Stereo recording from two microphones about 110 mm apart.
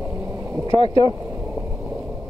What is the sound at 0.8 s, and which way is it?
Speech, 65° left (ahead or behind).